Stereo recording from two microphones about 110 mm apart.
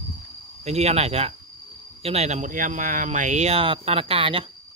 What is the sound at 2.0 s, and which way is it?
Speech, 80° right.